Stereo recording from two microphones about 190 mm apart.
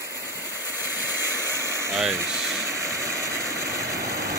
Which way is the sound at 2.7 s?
15° right (ahead or behind).